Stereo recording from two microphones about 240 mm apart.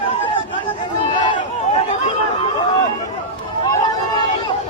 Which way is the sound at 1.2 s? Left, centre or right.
Left.